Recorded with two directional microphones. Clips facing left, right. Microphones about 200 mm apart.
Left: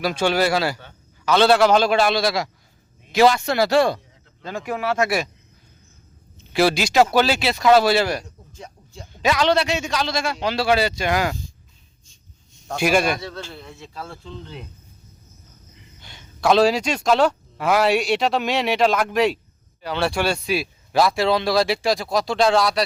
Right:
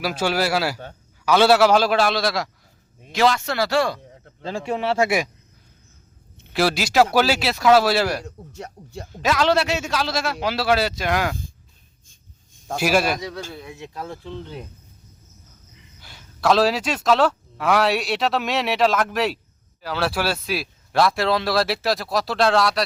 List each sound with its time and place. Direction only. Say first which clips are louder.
0.0 s speech: left 2 dB; 5° right (ahead or behind)
3.1 s speech: left 4 dB; 10° left (ahead or behind)
4.4 s speech: right 1 dB; 30° right (ahead or behind)
6.5 s speech: left 2 dB; centre (ahead or behind)
8.2 s speech: right 5 dB; 70° right (ahead or behind)
9.1 s speech: left 1 dB; centre (ahead or behind)
12.7 s speech: left 1 dB; 5° right (ahead or behind)
13.2 s speech: right 2 dB; 15° right (ahead or behind)
16.0 s speech: left 1 dB; 5° right (ahead or behind)